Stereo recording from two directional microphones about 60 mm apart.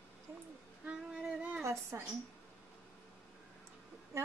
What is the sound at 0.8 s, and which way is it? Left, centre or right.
Female singing, centre.